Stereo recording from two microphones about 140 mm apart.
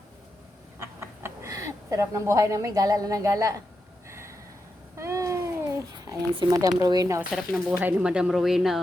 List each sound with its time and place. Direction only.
0.8 s a sound: 20° right (ahead or behind)
6.3 s speech: 30° right (ahead or behind)
7.3 s speech: centre (ahead or behind)
7.8 s speech: 10° right (ahead or behind)